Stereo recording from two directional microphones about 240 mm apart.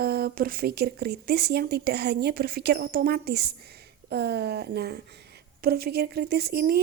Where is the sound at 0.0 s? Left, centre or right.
Right.